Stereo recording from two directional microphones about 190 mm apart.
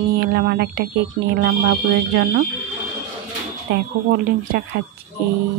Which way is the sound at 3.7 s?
55° right (ahead or behind).